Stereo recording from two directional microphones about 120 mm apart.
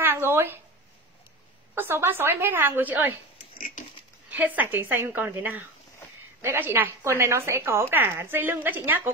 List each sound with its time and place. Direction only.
0.0 s a sound: 20° right (ahead or behind)
1.8 s a woman's voice: 20° right (ahead or behind)
4.3 s a woman's voice: 15° right (ahead or behind)